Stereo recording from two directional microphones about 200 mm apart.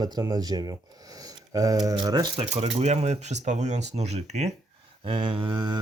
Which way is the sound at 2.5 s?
35° right (ahead or behind).